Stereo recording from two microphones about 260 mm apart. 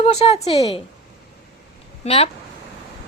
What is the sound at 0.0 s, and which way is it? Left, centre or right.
Speech, left.